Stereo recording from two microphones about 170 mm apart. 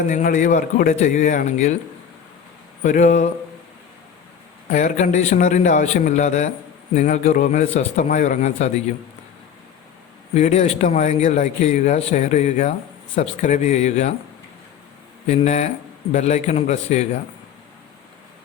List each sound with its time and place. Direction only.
0.1 s a man's voice: 50° left (ahead or behind)
2.8 s a man's voice: 45° left (ahead or behind)
4.7 s a man's voice: 45° left (ahead or behind)
10.3 s a man's voice: 40° left (ahead or behind)
15.3 s a man's voice: 40° left (ahead or behind)